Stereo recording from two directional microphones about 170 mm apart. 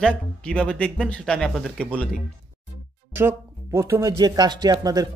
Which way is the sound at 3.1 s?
15° right (ahead or behind).